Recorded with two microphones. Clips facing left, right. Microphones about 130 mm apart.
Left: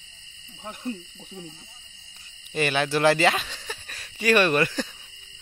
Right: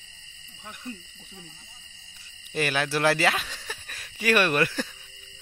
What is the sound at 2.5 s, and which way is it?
Speech, centre (ahead or behind).